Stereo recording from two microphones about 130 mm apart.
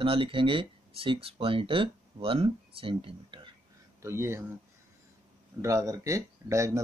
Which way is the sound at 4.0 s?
20° right (ahead or behind).